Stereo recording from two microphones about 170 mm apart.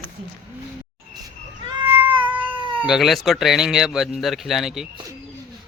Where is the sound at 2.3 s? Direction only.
10° right (ahead or behind).